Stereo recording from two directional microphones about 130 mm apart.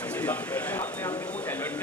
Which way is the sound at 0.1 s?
10° left (ahead or behind).